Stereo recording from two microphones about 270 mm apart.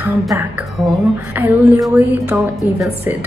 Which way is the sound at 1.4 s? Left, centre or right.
Centre.